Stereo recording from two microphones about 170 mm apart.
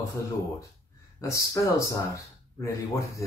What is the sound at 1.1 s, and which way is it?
Speech, 20° left (ahead or behind).